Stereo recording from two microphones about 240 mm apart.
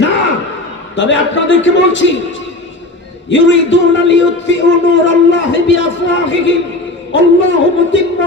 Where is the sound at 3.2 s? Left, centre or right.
Left.